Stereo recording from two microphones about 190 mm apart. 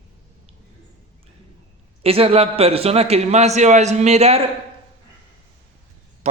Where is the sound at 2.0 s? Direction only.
30° right (ahead or behind).